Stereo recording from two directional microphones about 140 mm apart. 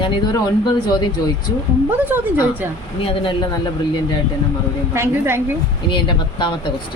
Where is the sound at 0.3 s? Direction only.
25° left (ahead or behind).